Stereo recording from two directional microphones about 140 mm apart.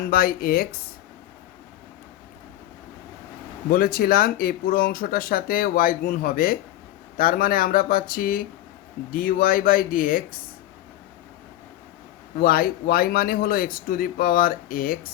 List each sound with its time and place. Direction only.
0.0 s speech: 90° left
3.7 s speech: 90° left
9.1 s speech: 80° left
12.4 s speech: 90° left